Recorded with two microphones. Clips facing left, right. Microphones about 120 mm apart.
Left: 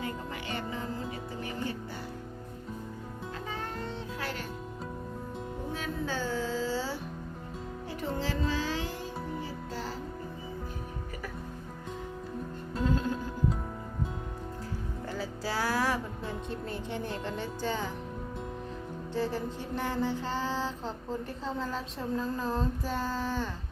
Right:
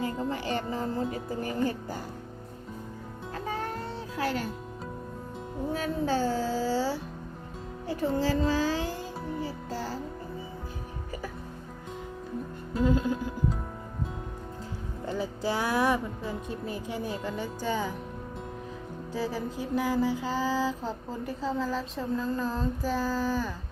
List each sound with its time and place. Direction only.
0.0 s music: 35° right (ahead or behind)
4.2 s music: 40° right (ahead or behind)
5.7 s a sound: 40° right (ahead or behind)
8.2 s music: 40° right (ahead or behind)
12.7 s music: 5° right (ahead or behind)
15.0 s music: 20° right (ahead or behind)
16.2 s speech: 10° right (ahead or behind)
19.1 s music: 5° right (ahead or behind)
21.2 s a sound: 5° right (ahead or behind)